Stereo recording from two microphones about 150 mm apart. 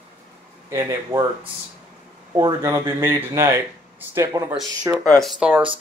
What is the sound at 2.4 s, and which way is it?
Speech, 20° right (ahead or behind).